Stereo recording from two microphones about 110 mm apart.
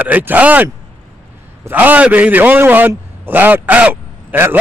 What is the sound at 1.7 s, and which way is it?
Speech, 15° right (ahead or behind).